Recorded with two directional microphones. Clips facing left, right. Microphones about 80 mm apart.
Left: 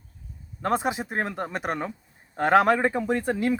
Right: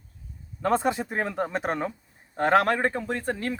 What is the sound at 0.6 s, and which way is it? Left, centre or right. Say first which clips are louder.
Speech: right 1 dB; centre.